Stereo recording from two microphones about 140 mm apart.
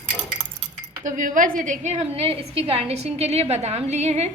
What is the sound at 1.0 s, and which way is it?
A woman's voice, 70° right (ahead or behind).